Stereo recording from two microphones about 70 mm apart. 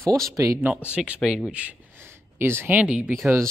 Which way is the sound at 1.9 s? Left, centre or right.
Right.